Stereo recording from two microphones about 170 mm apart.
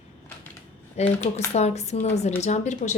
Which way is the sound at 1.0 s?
40° left (ahead or behind).